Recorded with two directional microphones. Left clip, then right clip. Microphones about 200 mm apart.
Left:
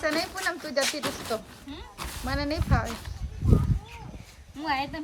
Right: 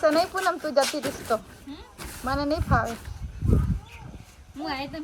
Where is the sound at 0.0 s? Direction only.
Centre (ahead or behind).